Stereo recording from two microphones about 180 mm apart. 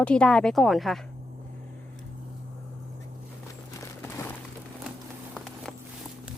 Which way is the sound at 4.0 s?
15° left (ahead or behind).